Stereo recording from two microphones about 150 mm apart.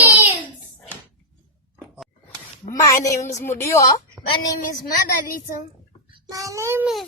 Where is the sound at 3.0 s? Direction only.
20° left (ahead or behind).